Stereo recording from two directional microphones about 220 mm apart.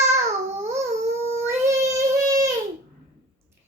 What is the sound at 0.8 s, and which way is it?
Dog, 30° right (ahead or behind).